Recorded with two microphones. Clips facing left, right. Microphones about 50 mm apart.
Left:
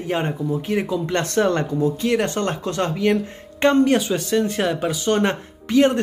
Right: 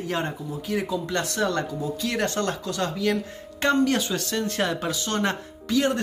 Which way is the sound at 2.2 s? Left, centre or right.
Left.